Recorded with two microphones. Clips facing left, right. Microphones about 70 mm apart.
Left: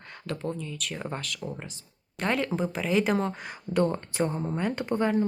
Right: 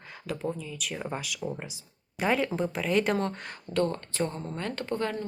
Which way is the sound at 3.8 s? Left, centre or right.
Centre.